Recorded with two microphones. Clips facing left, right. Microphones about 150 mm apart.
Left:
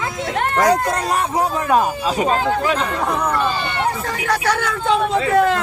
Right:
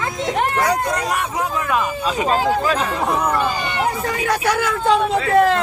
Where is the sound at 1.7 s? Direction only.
35° left (ahead or behind).